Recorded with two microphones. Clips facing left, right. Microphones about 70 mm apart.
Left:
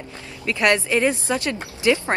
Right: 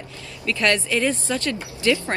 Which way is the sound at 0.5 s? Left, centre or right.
Left.